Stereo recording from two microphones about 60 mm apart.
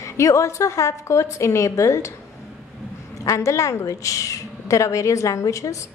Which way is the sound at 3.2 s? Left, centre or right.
Left.